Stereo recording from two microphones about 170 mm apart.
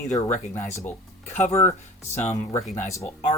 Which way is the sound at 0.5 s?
15° left (ahead or behind).